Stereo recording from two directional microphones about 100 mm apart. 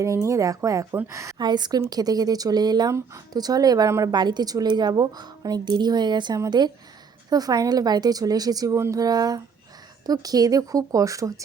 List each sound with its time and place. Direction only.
0.0 s speech: 30° right (ahead or behind)
1.4 s a woman's voice: 45° right (ahead or behind)